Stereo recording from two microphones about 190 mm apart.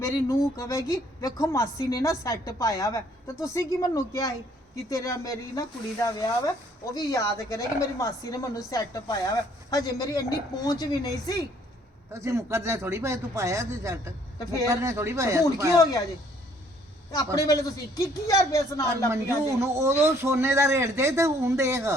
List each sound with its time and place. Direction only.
0.0 s a woman's voice: 15° left (ahead or behind)
12.1 s speech: 15° right (ahead or behind)
15.8 s a woman's voice: 20° left (ahead or behind)
17.3 s a woman's voice: 20° left (ahead or behind)
18.9 s speech: 15° right (ahead or behind)